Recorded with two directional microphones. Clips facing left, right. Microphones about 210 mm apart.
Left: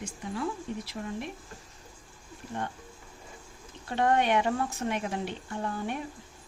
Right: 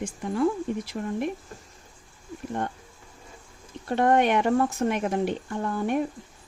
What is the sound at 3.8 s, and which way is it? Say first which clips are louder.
A woman's voice: right 5 dB; 50° right (ahead or behind).